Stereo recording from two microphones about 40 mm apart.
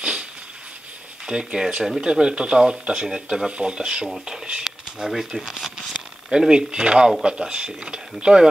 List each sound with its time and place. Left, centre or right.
0.0 s a sound: right
1.2 s speech: centre
4.6 s speech: centre; by 8.5 s right